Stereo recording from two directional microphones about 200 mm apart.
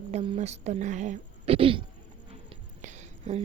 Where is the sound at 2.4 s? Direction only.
35° right (ahead or behind).